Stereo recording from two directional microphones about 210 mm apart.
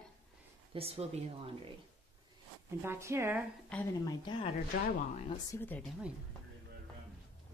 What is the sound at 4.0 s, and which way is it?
Speech, 25° left (ahead or behind).